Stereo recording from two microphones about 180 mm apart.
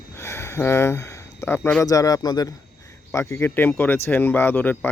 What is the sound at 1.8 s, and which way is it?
Speech, 20° left (ahead or behind).